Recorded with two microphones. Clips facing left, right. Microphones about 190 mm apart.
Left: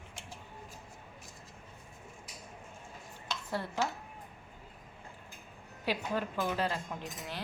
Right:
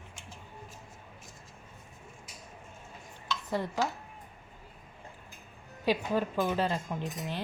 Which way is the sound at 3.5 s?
15° right (ahead or behind).